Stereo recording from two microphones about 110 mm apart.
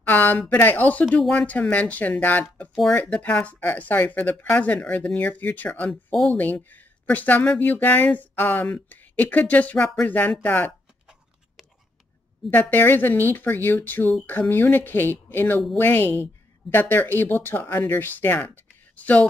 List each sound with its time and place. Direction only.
0.0 s speech: 15° left (ahead or behind)
2.7 s speech: centre (ahead or behind)
3.0 s speech: 15° left (ahead or behind)
12.5 s speech: 15° left (ahead or behind)